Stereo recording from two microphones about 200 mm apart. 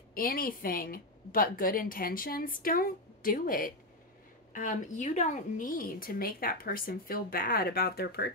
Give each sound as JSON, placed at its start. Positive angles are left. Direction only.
{"t": 0.1, "sound": "a woman's voice", "side_deg": 45}